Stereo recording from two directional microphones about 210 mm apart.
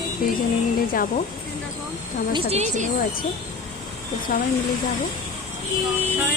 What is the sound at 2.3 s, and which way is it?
Speech, 30° right (ahead or behind).